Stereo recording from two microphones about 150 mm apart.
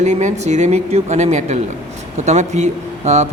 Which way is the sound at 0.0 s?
55° right (ahead or behind).